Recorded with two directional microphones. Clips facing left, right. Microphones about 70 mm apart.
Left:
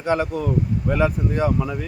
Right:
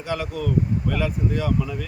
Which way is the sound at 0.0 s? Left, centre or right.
Left.